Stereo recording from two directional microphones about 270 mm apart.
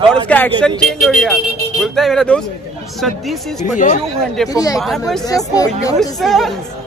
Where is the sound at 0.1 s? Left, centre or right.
Centre.